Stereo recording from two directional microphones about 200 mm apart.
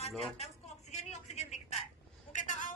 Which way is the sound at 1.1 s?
35° left (ahead or behind).